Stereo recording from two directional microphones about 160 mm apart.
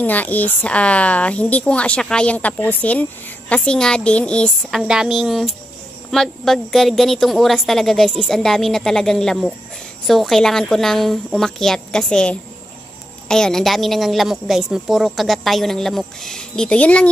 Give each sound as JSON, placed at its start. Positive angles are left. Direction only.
{"t": 0.0, "sound": "a woman's voice", "side_deg": 10}